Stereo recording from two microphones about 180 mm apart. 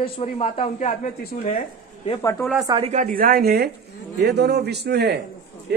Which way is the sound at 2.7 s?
35° right (ahead or behind).